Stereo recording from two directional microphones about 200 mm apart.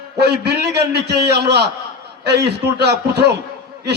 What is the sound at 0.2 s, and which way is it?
A man's voice, 55° right (ahead or behind).